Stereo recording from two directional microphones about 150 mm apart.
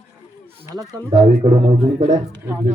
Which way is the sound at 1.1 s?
35° right (ahead or behind).